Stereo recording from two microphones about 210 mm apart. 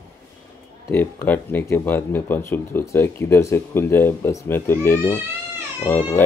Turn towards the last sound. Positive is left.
turn(degrees=10)  # may be behind; listen again after turning